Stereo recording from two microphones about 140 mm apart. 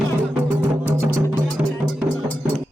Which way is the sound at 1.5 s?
Centre (ahead or behind).